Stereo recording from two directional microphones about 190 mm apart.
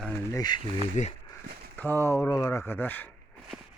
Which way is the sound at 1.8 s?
10° left (ahead or behind).